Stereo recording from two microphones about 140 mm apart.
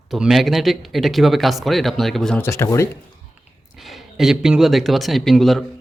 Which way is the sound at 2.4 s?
20° left (ahead or behind).